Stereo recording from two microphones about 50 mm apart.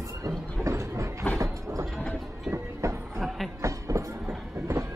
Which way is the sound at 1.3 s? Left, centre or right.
Right.